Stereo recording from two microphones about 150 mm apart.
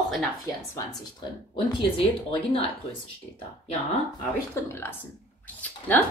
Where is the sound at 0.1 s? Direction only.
5° left (ahead or behind).